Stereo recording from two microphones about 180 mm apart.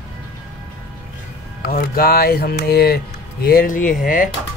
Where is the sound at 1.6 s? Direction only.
55° left (ahead or behind).